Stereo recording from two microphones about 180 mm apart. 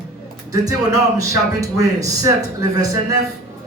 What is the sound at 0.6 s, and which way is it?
A man's voice, 20° right (ahead or behind).